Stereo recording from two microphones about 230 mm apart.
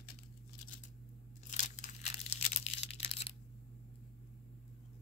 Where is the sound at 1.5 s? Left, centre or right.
Left.